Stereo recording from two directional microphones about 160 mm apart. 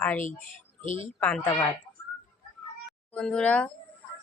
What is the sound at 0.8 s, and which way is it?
Speech, 50° left (ahead or behind).